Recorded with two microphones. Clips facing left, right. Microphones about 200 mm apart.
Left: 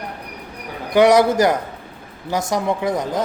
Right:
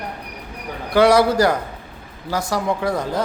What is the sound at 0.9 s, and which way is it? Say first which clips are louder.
A man's voice: left 1 dB; 20° left (ahead or behind).